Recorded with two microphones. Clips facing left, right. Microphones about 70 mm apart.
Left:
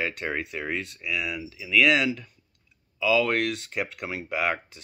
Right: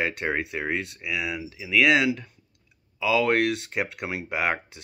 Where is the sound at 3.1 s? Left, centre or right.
Right.